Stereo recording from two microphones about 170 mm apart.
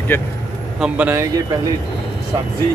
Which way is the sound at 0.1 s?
15° left (ahead or behind).